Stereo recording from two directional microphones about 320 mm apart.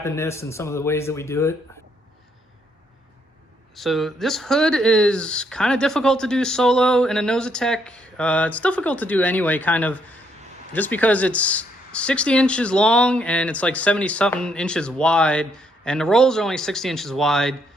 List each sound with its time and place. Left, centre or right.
0.0 s speech: centre
3.8 s speech: centre